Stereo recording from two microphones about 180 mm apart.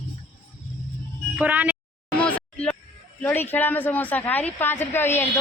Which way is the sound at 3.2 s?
10° left (ahead or behind).